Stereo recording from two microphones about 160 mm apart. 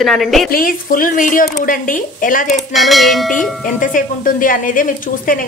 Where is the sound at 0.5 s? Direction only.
65° left (ahead or behind).